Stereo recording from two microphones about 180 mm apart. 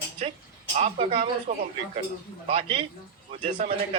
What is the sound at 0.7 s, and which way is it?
Speech, 35° right (ahead or behind).